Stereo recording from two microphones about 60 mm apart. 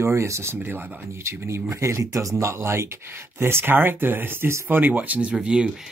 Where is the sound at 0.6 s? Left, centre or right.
Right.